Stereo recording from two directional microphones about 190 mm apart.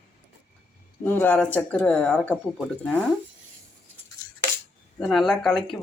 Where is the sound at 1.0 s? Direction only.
10° left (ahead or behind).